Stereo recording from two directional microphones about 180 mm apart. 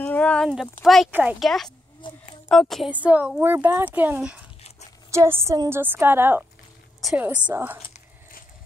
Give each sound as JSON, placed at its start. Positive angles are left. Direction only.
{"t": 0.0, "sound": "a sound", "side_deg": 10}
{"t": 0.5, "sound": "speech", "side_deg": 0}
{"t": 2.0, "sound": "speech", "side_deg": 25}
{"t": 2.5, "sound": "speech", "side_deg": 0}
{"t": 7.0, "sound": "a woman's voice", "side_deg": 0}